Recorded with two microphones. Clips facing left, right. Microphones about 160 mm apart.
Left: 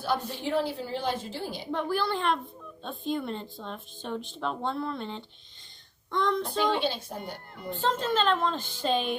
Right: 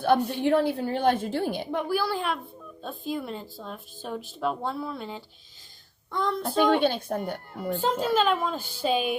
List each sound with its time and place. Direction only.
0.3 s a woman's voice: 60° right (ahead or behind)
1.7 s speech: 10° right (ahead or behind)
6.7 s a woman's voice: 55° right (ahead or behind)
7.8 s a woman's voice: 10° right (ahead or behind)